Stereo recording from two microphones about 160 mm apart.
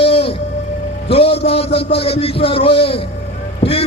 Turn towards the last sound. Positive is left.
turn(degrees=35)  # may be behind; listen again after turning